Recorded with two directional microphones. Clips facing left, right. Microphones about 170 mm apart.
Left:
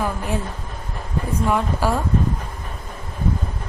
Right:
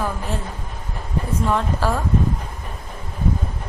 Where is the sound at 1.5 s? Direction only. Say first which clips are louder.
Left 1 dB; 10° left (ahead or behind).